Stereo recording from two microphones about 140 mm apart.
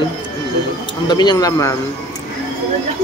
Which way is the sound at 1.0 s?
30° left (ahead or behind).